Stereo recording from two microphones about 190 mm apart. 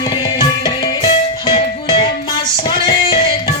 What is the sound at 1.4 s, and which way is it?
Music, 25° left (ahead or behind).